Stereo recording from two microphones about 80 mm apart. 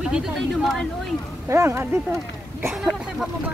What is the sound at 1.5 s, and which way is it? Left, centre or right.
Speech, right.